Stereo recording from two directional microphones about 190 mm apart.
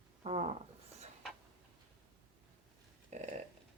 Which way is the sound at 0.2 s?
35° right (ahead or behind).